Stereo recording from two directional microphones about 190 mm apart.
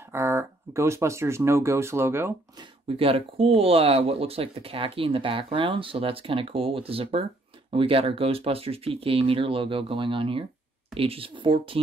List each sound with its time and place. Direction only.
0.1 s speech: 15° right (ahead or behind)
3.0 s speech: 30° right (ahead or behind)